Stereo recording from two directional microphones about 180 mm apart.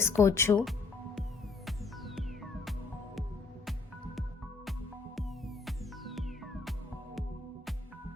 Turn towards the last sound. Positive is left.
turn(degrees=0)  # may be behind; listen again after turning